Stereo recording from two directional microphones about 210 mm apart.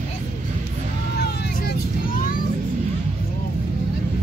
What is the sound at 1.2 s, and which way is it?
Vehicle, 50° left (ahead or behind).